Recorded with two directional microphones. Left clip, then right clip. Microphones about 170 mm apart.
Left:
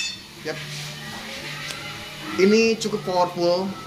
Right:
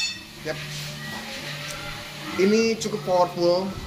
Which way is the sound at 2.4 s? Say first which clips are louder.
Left 3 dB; 20° left (ahead or behind).